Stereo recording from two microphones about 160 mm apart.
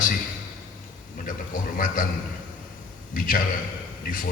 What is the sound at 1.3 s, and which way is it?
Speech, 55° left (ahead or behind).